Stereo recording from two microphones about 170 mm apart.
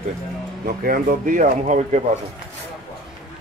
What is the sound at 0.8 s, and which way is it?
Speech, 50° right (ahead or behind).